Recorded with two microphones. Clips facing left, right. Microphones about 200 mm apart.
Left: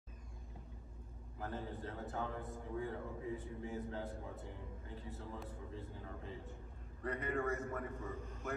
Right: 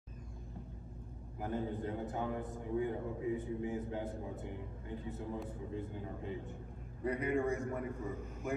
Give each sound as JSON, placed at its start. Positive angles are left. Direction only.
{"t": 1.4, "sound": "a man's voice", "side_deg": -15}